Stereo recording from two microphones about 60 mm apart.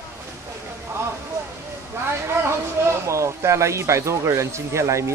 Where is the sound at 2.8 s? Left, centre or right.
Right.